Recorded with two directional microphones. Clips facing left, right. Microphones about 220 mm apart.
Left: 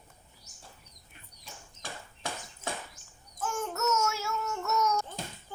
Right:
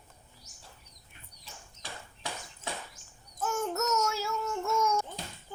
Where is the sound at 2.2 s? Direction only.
50° left (ahead or behind).